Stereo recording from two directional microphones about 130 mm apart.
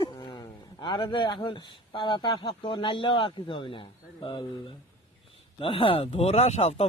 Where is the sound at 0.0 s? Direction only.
35° left (ahead or behind).